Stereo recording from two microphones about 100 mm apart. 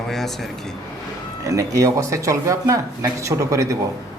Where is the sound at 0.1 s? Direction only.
5° left (ahead or behind).